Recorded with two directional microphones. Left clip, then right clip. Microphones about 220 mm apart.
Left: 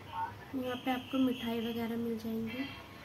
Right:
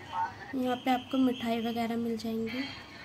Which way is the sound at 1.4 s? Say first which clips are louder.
Right 5 dB; 45° right (ahead or behind).